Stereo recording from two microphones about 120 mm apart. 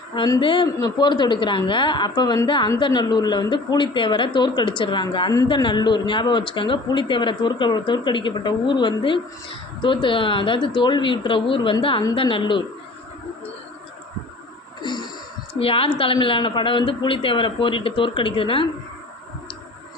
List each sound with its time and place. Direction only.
0.3 s a man's voice: 40° left (ahead or behind)
14.8 s a sound: 40° left (ahead or behind)
15.5 s a man's voice: 50° left (ahead or behind)